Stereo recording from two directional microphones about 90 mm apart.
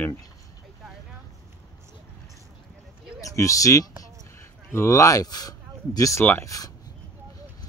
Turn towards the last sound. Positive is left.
turn(degrees=40)  # may be behind; listen again after turning